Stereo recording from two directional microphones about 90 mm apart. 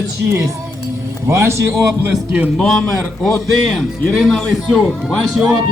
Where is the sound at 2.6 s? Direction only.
10° left (ahead or behind).